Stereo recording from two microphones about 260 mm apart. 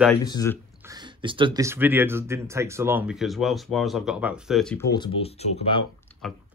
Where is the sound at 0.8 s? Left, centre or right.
Centre.